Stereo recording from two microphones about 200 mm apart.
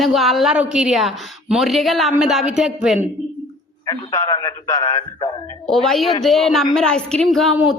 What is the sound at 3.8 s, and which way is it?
A man's voice, 15° left (ahead or behind).